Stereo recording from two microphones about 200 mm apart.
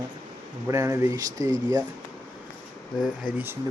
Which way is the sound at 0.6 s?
15° right (ahead or behind).